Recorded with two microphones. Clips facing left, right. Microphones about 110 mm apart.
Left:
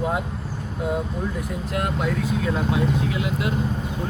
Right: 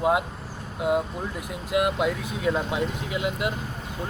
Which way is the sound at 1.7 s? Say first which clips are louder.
Right 3 dB; 15° right (ahead or behind).